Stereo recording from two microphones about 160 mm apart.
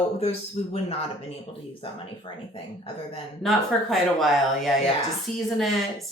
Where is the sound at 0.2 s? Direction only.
40° left (ahead or behind).